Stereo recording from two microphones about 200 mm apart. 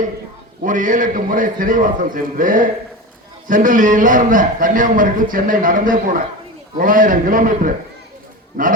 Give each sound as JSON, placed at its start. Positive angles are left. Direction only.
{"t": 0.6, "sound": "a man's voice", "side_deg": -40}